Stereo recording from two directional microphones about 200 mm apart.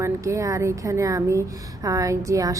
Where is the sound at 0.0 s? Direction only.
15° right (ahead or behind).